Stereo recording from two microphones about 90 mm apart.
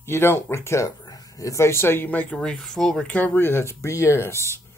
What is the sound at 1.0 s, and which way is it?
Speech, 45° left (ahead or behind).